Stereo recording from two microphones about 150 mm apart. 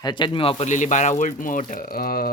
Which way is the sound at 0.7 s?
55° left (ahead or behind).